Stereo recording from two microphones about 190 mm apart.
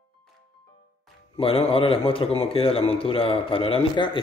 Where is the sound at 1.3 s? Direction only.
30° left (ahead or behind).